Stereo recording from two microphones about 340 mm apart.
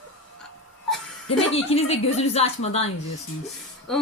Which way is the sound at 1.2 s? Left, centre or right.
Centre.